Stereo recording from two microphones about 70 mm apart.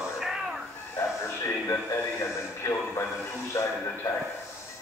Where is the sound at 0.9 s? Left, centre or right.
Left.